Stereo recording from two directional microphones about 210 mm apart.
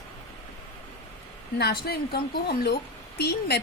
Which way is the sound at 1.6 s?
50° left (ahead or behind).